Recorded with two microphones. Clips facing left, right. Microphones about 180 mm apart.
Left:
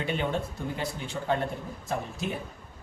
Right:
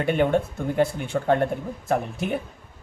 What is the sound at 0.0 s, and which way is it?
Speech, 55° right (ahead or behind).